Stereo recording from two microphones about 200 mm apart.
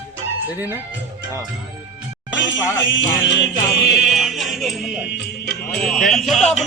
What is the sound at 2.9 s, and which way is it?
Music, 65° left (ahead or behind).